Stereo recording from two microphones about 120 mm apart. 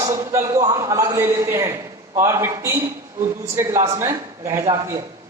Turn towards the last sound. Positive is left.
turn(degrees=-25)  # may be behind; listen again after turning